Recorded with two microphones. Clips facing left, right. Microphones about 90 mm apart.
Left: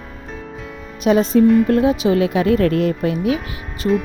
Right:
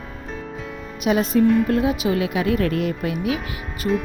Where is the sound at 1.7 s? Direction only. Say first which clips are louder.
Left 5 dB; 30° left (ahead or behind).